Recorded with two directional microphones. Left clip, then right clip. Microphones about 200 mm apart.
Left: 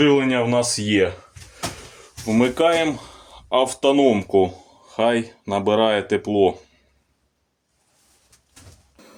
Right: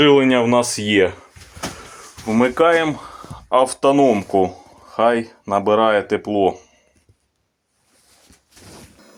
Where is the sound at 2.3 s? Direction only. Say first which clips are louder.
Right 3 dB; 10° left (ahead or behind).